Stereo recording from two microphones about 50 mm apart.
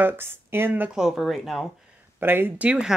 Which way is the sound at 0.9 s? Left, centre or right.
Centre.